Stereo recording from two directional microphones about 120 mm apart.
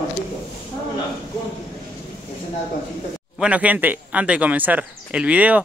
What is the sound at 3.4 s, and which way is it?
A man's voice, 10° right (ahead or behind).